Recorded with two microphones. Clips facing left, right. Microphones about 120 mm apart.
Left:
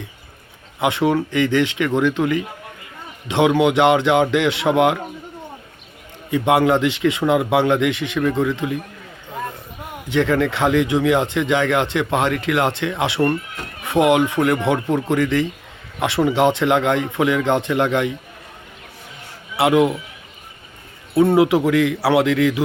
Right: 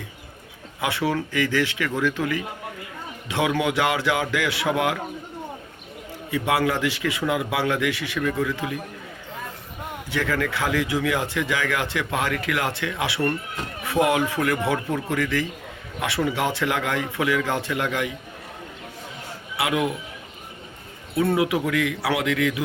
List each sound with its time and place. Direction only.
0.8 s speech: 20° left (ahead or behind)
6.3 s speech: 25° left (ahead or behind)
10.1 s speech: 25° left (ahead or behind)
19.5 s speech: 30° left (ahead or behind)
21.3 s speech: 30° left (ahead or behind)